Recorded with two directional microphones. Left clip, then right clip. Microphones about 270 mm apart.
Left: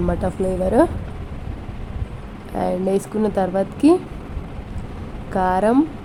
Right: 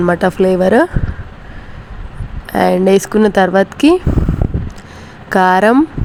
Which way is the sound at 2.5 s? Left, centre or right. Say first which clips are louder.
Right 10 dB; right.